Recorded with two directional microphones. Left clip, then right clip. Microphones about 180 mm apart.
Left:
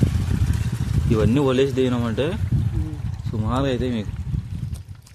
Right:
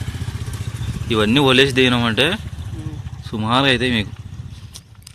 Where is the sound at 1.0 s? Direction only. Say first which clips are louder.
Right 5 dB; 10° right (ahead or behind).